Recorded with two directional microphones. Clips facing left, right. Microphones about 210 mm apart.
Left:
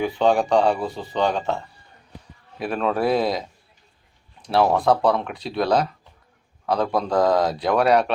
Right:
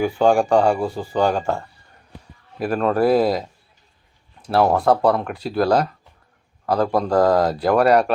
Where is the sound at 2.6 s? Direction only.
Centre (ahead or behind).